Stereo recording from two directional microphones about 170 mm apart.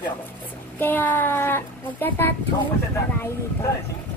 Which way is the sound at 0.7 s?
10° left (ahead or behind).